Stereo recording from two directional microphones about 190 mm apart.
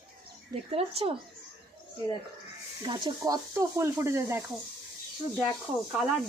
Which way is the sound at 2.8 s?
25° right (ahead or behind).